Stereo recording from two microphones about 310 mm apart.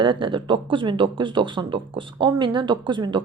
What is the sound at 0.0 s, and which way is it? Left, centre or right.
A woman's voice, centre.